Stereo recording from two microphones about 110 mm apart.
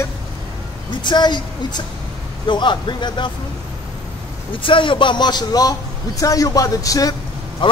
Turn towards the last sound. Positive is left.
turn(degrees=50)  # may be behind; listen again after turning